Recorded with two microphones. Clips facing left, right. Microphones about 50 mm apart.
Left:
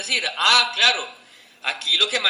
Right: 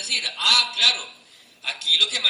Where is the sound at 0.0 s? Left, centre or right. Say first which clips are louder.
Left 4 dB; left.